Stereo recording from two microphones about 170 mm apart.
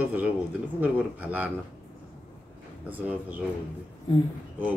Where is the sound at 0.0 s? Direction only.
10° right (ahead or behind).